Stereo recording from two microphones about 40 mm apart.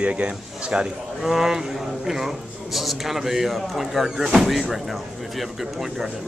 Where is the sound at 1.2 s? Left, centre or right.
Centre.